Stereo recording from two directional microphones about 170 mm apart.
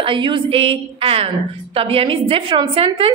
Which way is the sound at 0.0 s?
30° right (ahead or behind).